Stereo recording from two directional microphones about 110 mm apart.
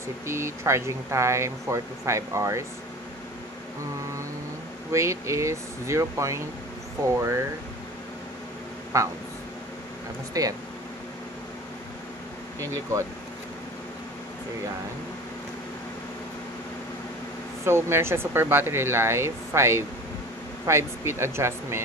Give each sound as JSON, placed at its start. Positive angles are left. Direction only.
{"t": 0.3, "sound": "speech", "side_deg": -25}
{"t": 4.9, "sound": "speech", "side_deg": -25}
{"t": 8.9, "sound": "speech", "side_deg": -25}
{"t": 10.4, "sound": "speech", "side_deg": -35}
{"t": 12.5, "sound": "speech", "side_deg": -30}
{"t": 17.6, "sound": "speech", "side_deg": -25}